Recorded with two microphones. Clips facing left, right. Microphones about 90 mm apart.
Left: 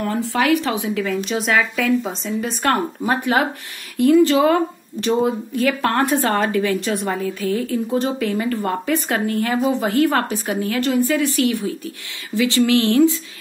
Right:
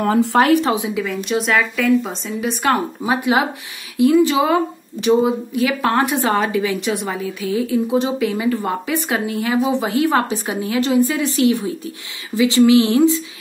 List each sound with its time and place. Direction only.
0.0 s speech: 65° right (ahead or behind)
0.4 s speech: 35° right (ahead or behind)
1.0 s a woman's voice: centre (ahead or behind); by 13.1 s 20° right (ahead or behind)